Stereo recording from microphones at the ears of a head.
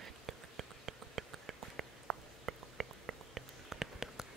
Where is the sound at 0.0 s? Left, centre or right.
Right.